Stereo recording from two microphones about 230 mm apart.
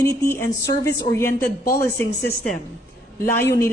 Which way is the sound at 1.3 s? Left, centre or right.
Left.